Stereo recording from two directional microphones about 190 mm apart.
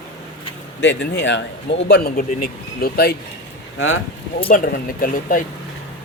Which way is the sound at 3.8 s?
90° left.